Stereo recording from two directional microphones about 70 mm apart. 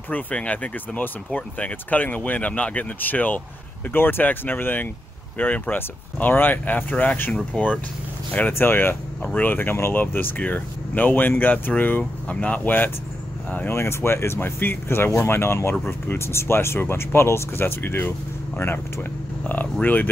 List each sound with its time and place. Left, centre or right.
0.1 s speech: centre
13.7 s speech: left